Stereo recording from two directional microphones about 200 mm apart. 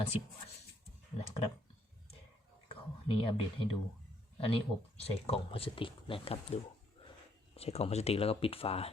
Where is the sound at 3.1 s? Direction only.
25° left (ahead or behind).